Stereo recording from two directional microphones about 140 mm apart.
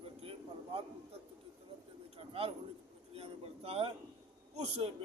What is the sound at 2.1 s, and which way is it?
A man's voice, 40° right (ahead or behind).